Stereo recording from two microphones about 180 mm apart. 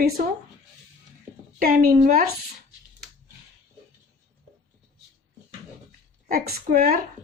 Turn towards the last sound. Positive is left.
turn(degrees=-55)  # may be behind; listen again after turning